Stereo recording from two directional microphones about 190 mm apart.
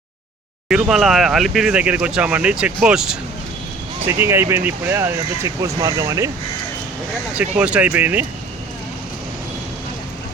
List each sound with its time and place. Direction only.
0.7 s speech: 5° right (ahead or behind)
7.3 s speech: 5° right (ahead or behind)